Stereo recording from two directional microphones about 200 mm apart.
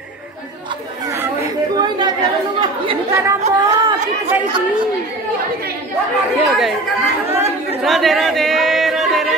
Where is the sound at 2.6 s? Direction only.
20° right (ahead or behind).